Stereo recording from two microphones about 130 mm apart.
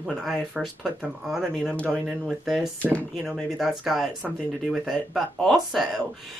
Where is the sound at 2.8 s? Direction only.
10° left (ahead or behind).